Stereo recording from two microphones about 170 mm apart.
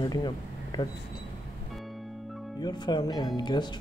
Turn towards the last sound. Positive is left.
turn(degrees=25)  # may be behind; listen again after turning